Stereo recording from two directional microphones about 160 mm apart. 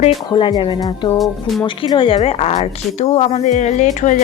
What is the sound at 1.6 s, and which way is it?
A woman's voice, 30° left (ahead or behind).